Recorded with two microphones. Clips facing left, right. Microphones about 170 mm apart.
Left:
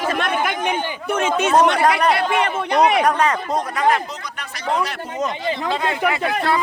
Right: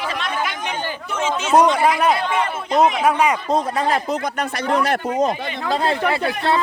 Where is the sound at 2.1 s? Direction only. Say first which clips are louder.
Left 2 dB; 70° left (ahead or behind).